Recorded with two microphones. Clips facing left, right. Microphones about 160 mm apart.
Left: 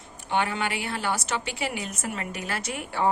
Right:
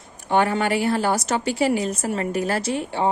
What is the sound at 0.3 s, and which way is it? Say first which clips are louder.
A woman's voice: right 7 dB; 45° right (ahead or behind).